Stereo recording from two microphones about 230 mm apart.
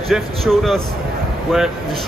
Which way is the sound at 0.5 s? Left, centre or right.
Centre.